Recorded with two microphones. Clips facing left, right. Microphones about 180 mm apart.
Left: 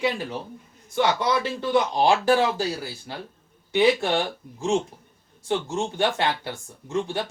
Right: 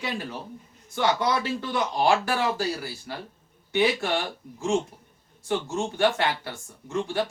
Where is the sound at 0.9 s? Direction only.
20° left (ahead or behind).